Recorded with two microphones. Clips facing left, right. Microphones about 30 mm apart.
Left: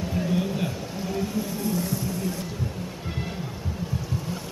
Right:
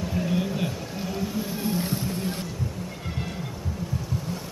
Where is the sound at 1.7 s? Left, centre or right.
Right.